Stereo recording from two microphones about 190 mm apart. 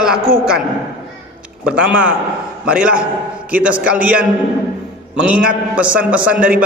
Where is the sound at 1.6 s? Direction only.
5° right (ahead or behind).